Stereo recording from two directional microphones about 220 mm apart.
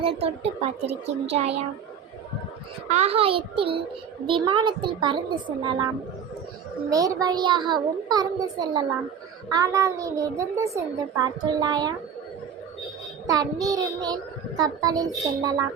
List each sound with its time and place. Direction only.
0.0 s a child's voice: 25° right (ahead or behind)
2.9 s a child's voice: 30° right (ahead or behind)
6.9 s a child's voice: 15° right (ahead or behind)
13.2 s a child's voice: 15° right (ahead or behind)